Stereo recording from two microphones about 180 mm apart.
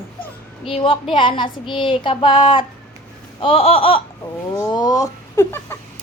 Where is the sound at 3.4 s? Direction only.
30° left (ahead or behind).